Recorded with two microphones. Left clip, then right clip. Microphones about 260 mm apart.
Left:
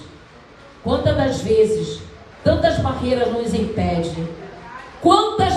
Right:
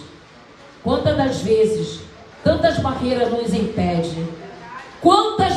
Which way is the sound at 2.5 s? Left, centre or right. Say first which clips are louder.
Even; right.